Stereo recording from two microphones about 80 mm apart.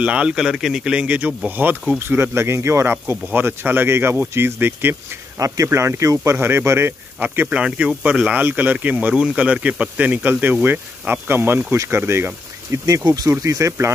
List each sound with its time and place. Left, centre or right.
0.0 s speech: centre
5.4 s speech: right
7.2 s speech: centre
12.7 s speech: right
13.3 s speech: right